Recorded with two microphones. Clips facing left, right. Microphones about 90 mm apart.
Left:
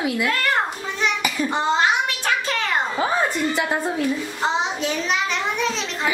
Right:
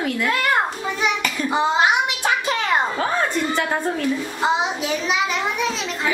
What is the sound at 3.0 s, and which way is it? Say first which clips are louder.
Speech: even; 10° left (ahead or behind).